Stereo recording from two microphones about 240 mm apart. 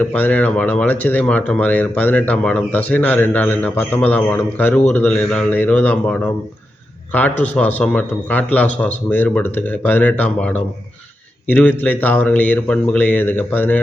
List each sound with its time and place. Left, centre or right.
0.0 s a man's voice: centre